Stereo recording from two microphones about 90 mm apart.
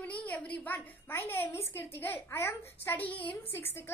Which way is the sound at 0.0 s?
15° left (ahead or behind).